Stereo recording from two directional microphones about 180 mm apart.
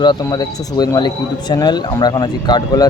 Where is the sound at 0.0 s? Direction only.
25° left (ahead or behind).